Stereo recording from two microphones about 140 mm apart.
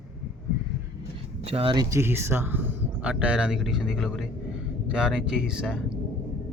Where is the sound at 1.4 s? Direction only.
40° right (ahead or behind).